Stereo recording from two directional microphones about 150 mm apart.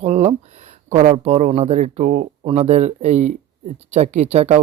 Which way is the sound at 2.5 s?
45° right (ahead or behind).